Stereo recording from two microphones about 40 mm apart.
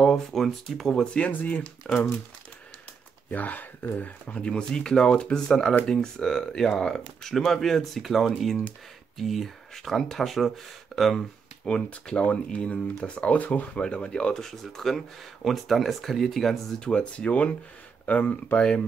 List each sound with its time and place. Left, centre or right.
0.0 s speech: centre
1.3 s speech: left
1.8 s speech: centre
3.3 s speech: left
4.3 s speech: left; by 11.1 s centre
11.1 s speech: centre
12.5 s speech: left
14.4 s speech: centre
16.8 s speech: left